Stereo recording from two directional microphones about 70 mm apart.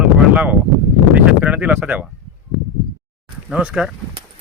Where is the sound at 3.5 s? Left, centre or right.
Centre.